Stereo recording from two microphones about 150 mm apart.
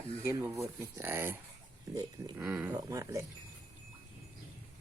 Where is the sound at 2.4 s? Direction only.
5° right (ahead or behind).